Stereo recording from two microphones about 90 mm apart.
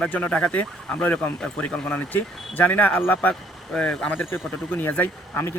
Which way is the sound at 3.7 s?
10° left (ahead or behind).